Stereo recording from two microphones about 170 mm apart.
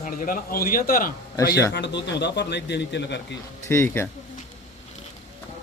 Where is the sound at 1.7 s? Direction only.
90° left.